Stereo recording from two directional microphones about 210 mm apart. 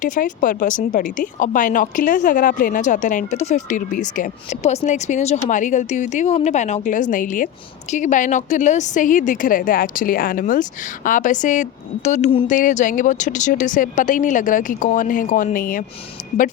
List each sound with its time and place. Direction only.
0.0 s speech: 40° left (ahead or behind)